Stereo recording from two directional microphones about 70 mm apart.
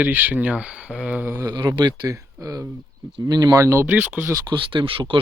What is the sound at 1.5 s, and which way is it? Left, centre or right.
Speech, right.